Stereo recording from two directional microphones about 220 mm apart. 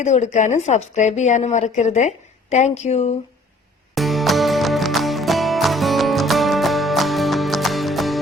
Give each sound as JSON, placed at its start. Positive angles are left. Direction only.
{"t": 0.0, "sound": "a woman's voice", "side_deg": 30}
{"t": 3.9, "sound": "music", "side_deg": 0}